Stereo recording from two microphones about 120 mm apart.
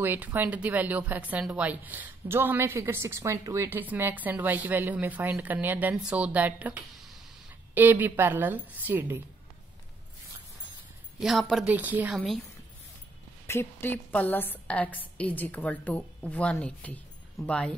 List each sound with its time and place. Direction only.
0.0 s a woman's voice: 15° right (ahead or behind)
11.1 s a woman's voice: 5° right (ahead or behind)
13.5 s a woman's voice: 20° left (ahead or behind)